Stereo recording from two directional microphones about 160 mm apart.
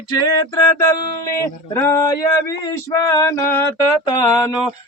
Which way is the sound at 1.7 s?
15° left (ahead or behind).